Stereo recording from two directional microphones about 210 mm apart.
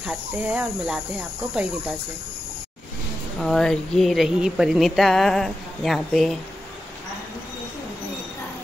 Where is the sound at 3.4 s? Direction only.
Centre (ahead or behind).